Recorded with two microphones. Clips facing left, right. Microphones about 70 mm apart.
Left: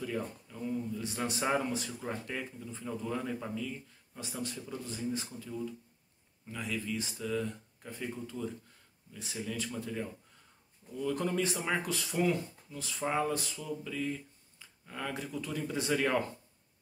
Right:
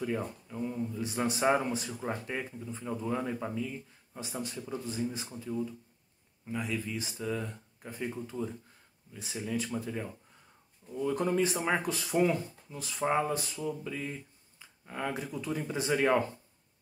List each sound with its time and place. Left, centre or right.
0.0 s speech: right